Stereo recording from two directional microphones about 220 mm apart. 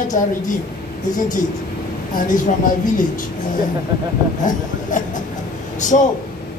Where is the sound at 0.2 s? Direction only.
35° left (ahead or behind).